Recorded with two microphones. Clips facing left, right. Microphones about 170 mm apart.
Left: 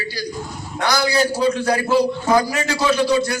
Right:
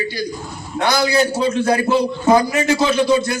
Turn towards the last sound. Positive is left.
turn(degrees=-20)  # may be behind; listen again after turning